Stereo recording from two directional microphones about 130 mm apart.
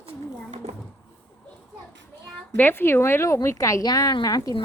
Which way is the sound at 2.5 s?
15° left (ahead or behind).